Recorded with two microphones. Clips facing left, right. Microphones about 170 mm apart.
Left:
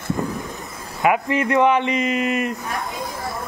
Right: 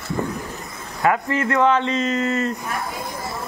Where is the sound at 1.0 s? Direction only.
15° left (ahead or behind).